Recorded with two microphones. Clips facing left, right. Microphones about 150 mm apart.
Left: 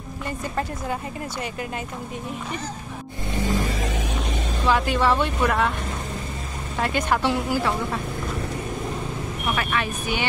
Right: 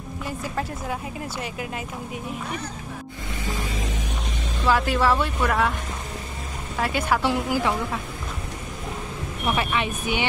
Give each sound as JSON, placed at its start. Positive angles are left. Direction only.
{"t": 3.7, "sound": "a sound", "side_deg": 75}
{"t": 4.6, "sound": "speech", "side_deg": 0}
{"t": 6.8, "sound": "a woman's voice", "side_deg": -5}
{"t": 9.6, "sound": "speech", "side_deg": -20}